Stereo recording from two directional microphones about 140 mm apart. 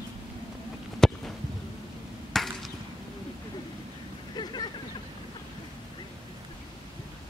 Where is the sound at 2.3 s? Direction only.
Centre (ahead or behind).